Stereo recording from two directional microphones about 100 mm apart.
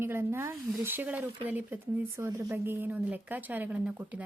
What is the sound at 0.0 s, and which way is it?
Speech, 25° right (ahead or behind).